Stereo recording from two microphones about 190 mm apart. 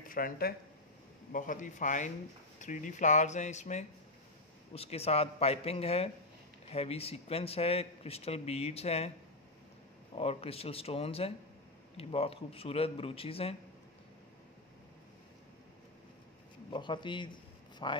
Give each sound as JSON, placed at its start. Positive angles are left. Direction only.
{"t": 0.1, "sound": "a man's voice", "side_deg": 50}
{"t": 10.1, "sound": "a man's voice", "side_deg": 30}
{"t": 16.7, "sound": "a man's voice", "side_deg": 25}